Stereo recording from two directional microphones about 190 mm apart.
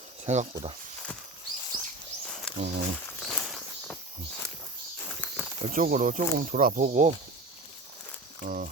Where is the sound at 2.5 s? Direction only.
5° left (ahead or behind).